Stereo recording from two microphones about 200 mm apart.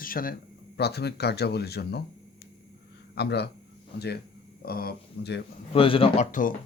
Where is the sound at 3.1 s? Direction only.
55° left (ahead or behind).